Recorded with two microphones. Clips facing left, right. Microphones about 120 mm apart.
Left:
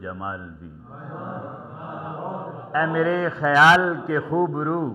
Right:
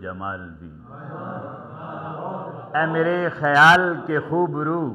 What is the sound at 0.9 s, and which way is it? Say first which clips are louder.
Mantra: right 1 dB; 25° right (ahead or behind).